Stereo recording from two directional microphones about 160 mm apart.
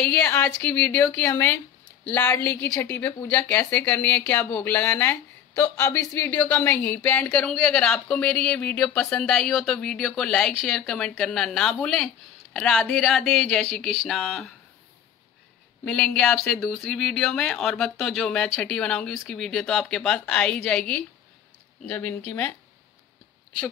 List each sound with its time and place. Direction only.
0.0 s speech: 5° left (ahead or behind)
15.8 s speech: 5° left (ahead or behind)